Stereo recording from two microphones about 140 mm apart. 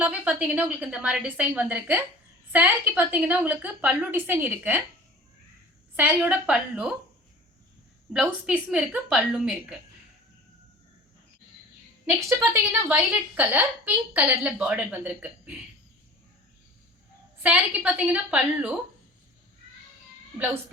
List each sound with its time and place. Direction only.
0.0 s a woman's voice: 10° right (ahead or behind)
6.0 s a woman's voice: 10° right (ahead or behind)
8.1 s a woman's voice: 5° right (ahead or behind)
12.0 s a woman's voice: 15° right (ahead or behind)
17.4 s a woman's voice: 10° right (ahead or behind)